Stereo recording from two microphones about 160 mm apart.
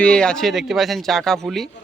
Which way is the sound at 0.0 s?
5° left (ahead or behind).